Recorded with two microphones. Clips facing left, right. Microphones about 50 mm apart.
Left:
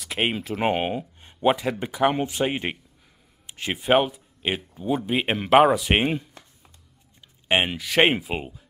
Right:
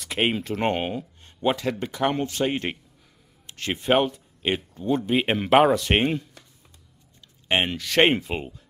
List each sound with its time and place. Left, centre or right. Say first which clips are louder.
0.0 s speech: right 1 dB; centre
7.4 s speech: left 1 dB; centre